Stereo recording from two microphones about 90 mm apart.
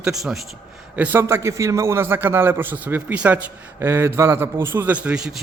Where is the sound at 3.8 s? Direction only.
30° right (ahead or behind).